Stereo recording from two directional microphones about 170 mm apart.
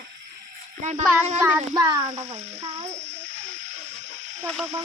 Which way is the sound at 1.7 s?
25° right (ahead or behind).